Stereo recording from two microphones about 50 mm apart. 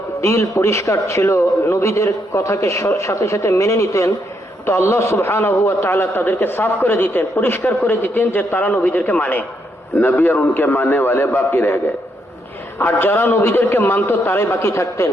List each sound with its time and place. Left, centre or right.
0.2 s a man's voice: left
3.0 s speech: left
4.6 s a man's voice: left
10.0 s a man's voice: left
12.8 s a man's voice: left
14.7 s a man's voice: left